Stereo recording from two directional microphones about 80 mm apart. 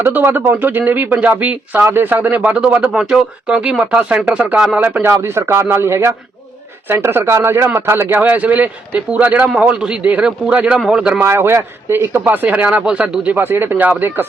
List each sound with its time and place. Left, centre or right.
0.0 s speech: right
5.1 s speech: right; by 11.2 s centre
11.2 s speech: right